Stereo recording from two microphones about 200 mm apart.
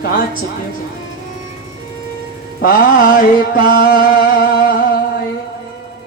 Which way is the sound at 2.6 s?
45° left (ahead or behind).